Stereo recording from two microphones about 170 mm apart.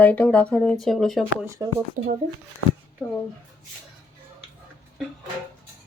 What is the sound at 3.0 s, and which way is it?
Speech, 5° left (ahead or behind).